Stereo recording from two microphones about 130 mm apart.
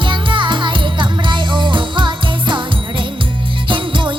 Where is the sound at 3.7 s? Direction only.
40° right (ahead or behind).